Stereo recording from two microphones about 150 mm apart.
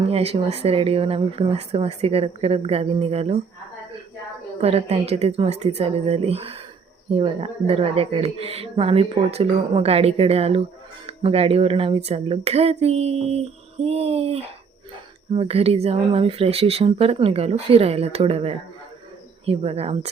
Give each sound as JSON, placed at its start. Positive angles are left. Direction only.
{"t": 0.0, "sound": "speech", "side_deg": -40}
{"t": 4.6, "sound": "speech", "side_deg": -45}